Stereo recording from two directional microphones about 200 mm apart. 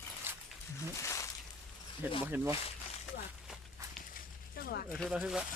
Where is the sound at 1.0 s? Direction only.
15° left (ahead or behind).